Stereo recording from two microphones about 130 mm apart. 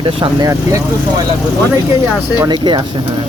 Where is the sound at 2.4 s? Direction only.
35° right (ahead or behind).